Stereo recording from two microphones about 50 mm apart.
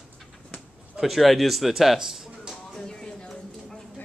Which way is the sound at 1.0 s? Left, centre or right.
Centre.